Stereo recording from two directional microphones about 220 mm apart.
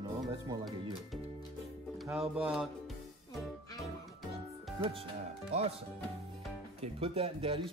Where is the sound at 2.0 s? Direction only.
5° right (ahead or behind).